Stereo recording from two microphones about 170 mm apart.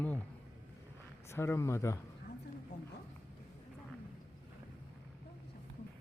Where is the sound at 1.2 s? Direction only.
15° left (ahead or behind).